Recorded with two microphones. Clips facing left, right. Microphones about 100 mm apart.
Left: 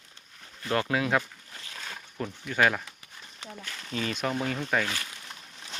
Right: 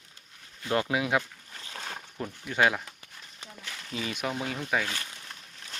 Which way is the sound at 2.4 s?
20° right (ahead or behind).